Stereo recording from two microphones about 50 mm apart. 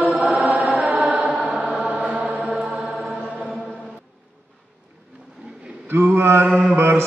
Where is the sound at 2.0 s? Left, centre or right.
Right; by 3.2 s centre.